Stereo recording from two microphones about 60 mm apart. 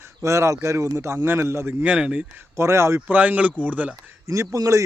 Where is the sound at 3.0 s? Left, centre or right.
Right.